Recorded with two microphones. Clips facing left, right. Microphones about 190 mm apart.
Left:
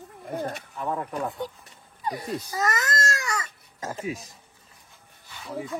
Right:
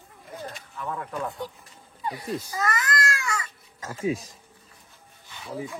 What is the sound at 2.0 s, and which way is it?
Speech, 40° left (ahead or behind).